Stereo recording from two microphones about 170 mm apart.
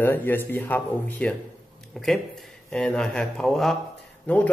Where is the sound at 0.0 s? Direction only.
10° left (ahead or behind).